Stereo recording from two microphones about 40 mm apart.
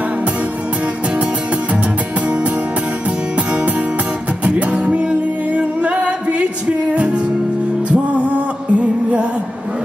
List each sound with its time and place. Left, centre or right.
4.5 s music: right